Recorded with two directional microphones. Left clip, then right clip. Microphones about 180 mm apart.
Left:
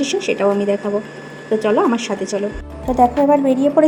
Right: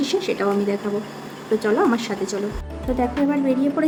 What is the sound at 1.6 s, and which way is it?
A woman's voice, 10° left (ahead or behind).